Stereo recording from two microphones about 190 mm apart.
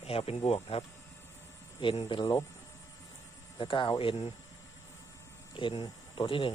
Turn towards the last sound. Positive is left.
turn(degrees=25)  # may be behind; listen again after turning